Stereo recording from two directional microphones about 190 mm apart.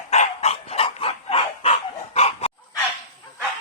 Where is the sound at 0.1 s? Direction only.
35° left (ahead or behind).